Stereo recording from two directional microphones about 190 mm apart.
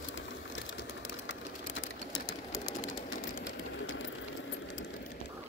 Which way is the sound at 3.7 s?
90° left.